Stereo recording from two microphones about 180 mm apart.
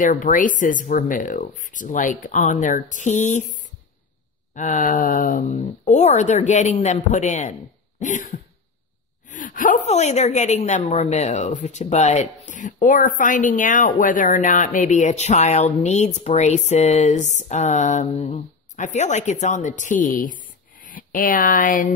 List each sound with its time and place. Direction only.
0.0 s speech: 45° left (ahead or behind)
4.6 s speech: 45° left (ahead or behind)